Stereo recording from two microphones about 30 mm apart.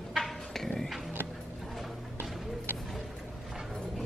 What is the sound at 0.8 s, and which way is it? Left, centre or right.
Music, centre.